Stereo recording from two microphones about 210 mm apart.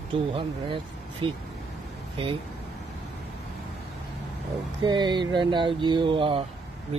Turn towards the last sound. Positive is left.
turn(degrees=-25)  # may be behind; listen again after turning